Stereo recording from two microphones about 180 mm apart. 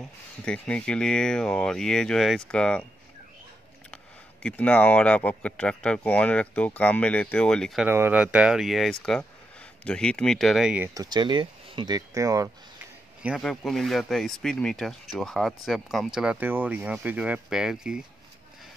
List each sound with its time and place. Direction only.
0.0 s speech: 5° left (ahead or behind)
3.9 s speech: 5° left (ahead or behind)
7.9 s speech: 10° right (ahead or behind)
11.0 s speech: 25° right (ahead or behind)
13.2 s speech: centre (ahead or behind)